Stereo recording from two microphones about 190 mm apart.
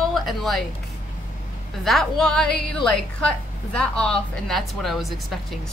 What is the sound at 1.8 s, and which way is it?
Speech, centre (ahead or behind).